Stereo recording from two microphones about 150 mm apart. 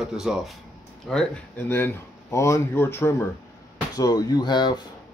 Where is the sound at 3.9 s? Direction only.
25° left (ahead or behind).